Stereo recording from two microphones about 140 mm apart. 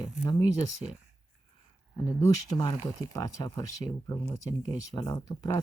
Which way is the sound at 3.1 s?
25° left (ahead or behind).